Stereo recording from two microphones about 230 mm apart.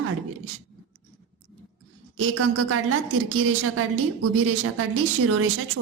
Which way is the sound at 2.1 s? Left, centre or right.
Right.